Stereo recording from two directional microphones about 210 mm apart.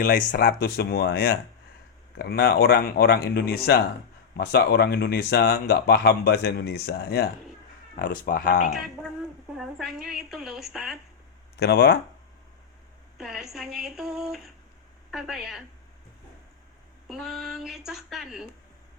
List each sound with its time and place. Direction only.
0.0 s speech: 40° left (ahead or behind)
9.6 s a woman's voice: centre (ahead or behind)
11.5 s speech: 50° left (ahead or behind)
13.1 s a woman's voice: centre (ahead or behind)
17.1 s a woman's voice: centre (ahead or behind)